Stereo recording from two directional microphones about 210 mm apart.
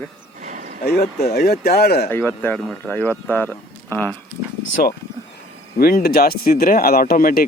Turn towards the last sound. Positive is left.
turn(degrees=45)  # may be behind; listen again after turning